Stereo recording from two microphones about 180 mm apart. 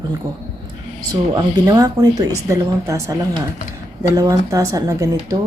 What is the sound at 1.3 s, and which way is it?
Speech, 25° right (ahead or behind).